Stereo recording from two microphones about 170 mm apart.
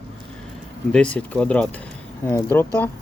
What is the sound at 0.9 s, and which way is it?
Speech, 5° left (ahead or behind).